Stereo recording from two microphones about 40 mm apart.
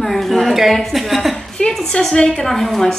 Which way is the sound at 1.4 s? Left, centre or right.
Centre.